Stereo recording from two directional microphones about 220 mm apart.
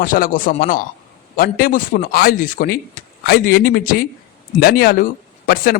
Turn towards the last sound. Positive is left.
turn(degrees=40)  # may be behind; listen again after turning